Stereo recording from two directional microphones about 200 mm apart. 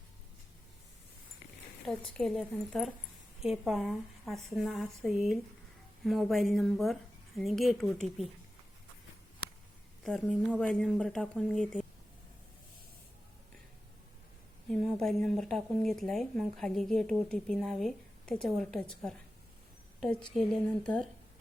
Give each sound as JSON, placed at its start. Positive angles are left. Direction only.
{"t": 2.1, "sound": "speech", "side_deg": 5}
{"t": 10.0, "sound": "speech", "side_deg": 0}
{"t": 14.7, "sound": "speech", "side_deg": 0}
{"t": 20.0, "sound": "a woman's voice", "side_deg": 5}